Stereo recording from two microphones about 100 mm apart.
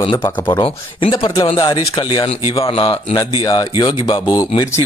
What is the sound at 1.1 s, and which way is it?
Speech, 50° left (ahead or behind).